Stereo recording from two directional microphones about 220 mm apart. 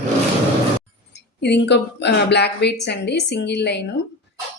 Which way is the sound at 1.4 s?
50° left (ahead or behind).